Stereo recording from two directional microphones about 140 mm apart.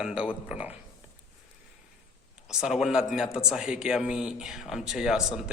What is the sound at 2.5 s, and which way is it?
A man's voice, 5° right (ahead or behind).